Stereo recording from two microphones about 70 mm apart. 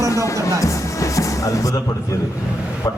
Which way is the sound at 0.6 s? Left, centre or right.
Left.